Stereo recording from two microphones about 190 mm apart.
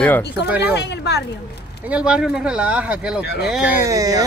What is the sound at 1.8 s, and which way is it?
Speech, 5° right (ahead or behind).